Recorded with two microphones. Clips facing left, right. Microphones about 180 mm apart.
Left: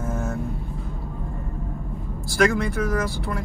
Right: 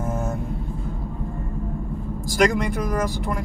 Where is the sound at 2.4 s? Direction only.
15° right (ahead or behind).